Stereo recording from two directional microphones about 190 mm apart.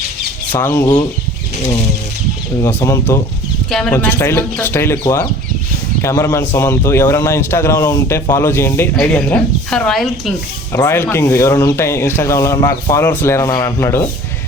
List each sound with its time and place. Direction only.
0.5 s speech: 10° left (ahead or behind)
2.6 s speech: 15° left (ahead or behind)
3.7 s speech: 5° left (ahead or behind)
10.7 s speech: 15° left (ahead or behind)